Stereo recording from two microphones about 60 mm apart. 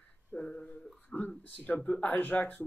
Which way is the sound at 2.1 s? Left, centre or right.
Left.